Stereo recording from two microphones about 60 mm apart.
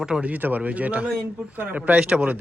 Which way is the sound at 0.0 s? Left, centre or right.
Centre.